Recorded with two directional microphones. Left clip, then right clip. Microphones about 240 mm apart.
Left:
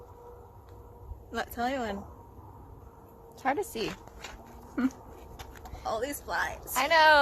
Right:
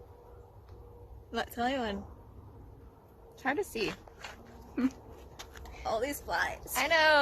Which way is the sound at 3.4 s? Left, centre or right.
Centre.